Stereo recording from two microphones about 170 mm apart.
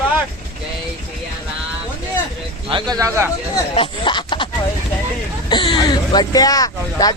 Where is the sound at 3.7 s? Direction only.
30° left (ahead or behind).